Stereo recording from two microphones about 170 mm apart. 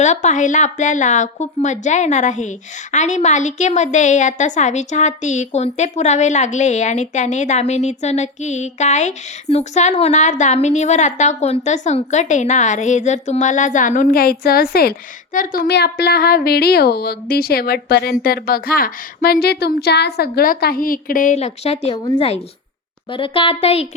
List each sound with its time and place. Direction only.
0.0 s a woman's voice: 45° left (ahead or behind)
21.9 s a woman's voice: 25° left (ahead or behind)